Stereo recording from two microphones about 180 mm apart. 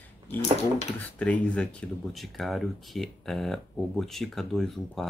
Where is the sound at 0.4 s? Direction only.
40° left (ahead or behind).